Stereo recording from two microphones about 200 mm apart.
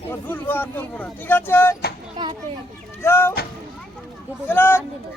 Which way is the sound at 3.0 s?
10° left (ahead or behind).